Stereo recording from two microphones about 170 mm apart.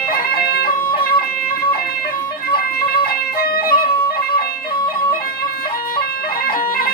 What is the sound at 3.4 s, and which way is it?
Music, 60° left (ahead or behind).